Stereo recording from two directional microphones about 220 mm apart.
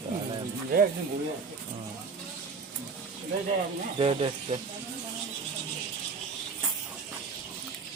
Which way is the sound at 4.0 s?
25° right (ahead or behind).